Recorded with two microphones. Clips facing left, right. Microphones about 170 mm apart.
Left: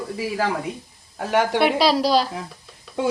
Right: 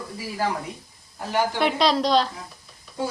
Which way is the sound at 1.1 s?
75° left (ahead or behind).